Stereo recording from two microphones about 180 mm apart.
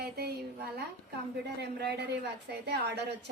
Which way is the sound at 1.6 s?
65° right (ahead or behind).